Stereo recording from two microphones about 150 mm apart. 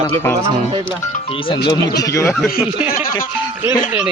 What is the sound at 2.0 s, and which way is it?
Speech, 20° left (ahead or behind).